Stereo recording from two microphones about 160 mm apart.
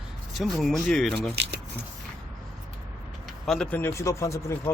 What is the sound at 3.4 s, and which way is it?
Speech, 5° left (ahead or behind).